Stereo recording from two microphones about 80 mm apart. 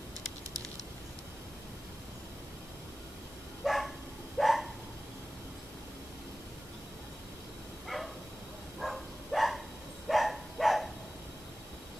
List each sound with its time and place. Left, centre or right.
3.6 s dog: centre
4.4 s a sound: centre
7.9 s bow-wow: centre
8.7 s dog: centre